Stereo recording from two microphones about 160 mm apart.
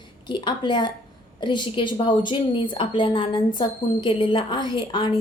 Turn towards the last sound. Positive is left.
turn(degrees=30)  # may be behind; listen again after turning